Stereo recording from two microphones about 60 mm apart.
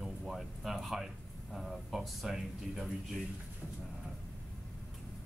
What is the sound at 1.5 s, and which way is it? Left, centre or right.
A man's voice, centre.